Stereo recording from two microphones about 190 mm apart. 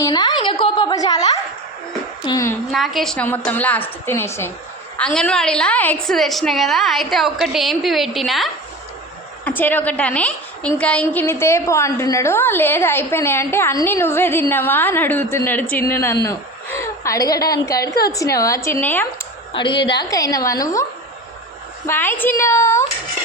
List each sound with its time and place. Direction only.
0.0 s a sound: 20° left (ahead or behind)
2.2 s a woman's voice: 15° left (ahead or behind)
2.7 s a woman's voice: centre (ahead or behind)
19.5 s a woman's voice: 25° left (ahead or behind)
21.8 s a woman's voice: 10° left (ahead or behind)